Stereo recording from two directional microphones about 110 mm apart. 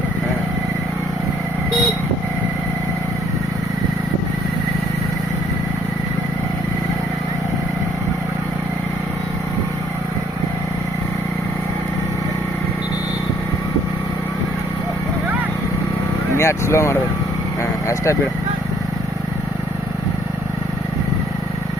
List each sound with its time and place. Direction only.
16.4 s vehicle: 25° left (ahead or behind)
17.8 s speech: 25° left (ahead or behind)